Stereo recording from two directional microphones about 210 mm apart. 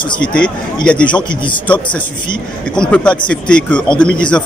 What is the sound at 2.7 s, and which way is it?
Speech, 5° left (ahead or behind).